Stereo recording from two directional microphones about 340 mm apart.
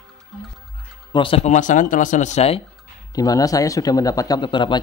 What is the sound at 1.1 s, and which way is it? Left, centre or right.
Speech, centre.